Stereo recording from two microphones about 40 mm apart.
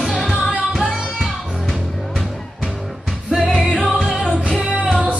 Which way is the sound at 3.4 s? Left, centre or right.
Centre.